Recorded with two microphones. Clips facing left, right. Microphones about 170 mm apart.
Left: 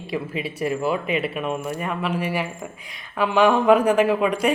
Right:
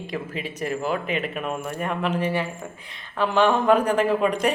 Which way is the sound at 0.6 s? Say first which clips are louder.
Left 3 dB; 5° left (ahead or behind).